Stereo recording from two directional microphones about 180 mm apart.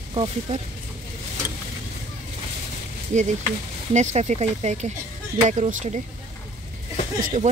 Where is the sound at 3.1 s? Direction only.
40° right (ahead or behind).